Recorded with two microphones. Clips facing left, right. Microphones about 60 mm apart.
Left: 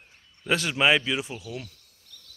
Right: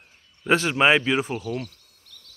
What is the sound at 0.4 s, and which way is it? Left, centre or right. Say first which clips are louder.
Speech: right 4 dB; right.